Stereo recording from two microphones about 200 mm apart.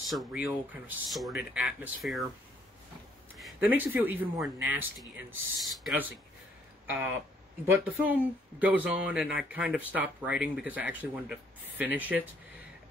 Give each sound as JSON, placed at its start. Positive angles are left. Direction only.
{"t": 0.1, "sound": "speech", "side_deg": 0}
{"t": 3.3, "sound": "speech", "side_deg": -5}